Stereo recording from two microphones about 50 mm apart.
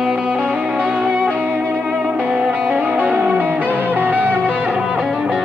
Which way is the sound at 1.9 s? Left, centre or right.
Right.